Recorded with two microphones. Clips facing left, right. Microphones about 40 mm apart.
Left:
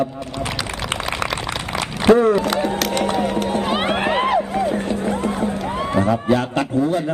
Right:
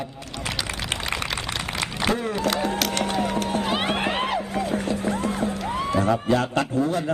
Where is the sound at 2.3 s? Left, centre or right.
Centre.